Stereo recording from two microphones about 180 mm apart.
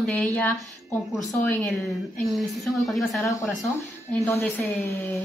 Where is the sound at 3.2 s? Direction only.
15° left (ahead or behind).